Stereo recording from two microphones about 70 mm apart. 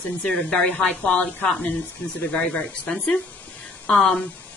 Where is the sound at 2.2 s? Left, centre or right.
Centre.